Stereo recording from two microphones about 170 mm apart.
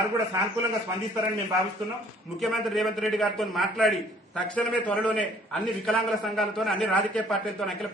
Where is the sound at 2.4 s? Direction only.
Centre (ahead or behind).